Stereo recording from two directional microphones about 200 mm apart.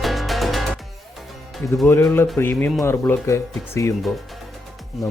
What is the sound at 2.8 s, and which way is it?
A man's voice, 15° left (ahead or behind).